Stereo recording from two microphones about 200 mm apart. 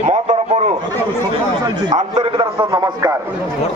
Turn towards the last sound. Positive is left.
turn(degrees=-20)  # may be behind; listen again after turning